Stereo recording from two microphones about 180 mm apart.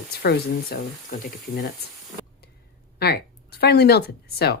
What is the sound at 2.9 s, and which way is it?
Speech, 65° left (ahead or behind).